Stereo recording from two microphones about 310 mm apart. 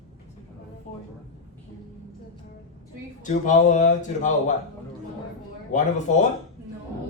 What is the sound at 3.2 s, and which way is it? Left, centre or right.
Speech, left.